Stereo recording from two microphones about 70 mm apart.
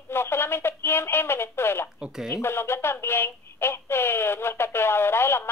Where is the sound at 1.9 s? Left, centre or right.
Centre.